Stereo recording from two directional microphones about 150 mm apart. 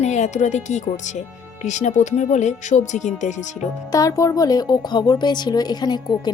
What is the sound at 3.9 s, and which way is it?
Speech, 25° left (ahead or behind).